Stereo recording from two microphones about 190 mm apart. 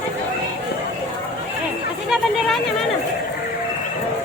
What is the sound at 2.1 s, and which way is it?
Speech, centre (ahead or behind).